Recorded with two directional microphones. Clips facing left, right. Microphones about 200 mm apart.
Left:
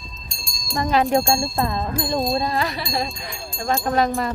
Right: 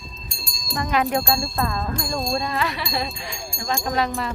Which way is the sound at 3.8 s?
45° left (ahead or behind).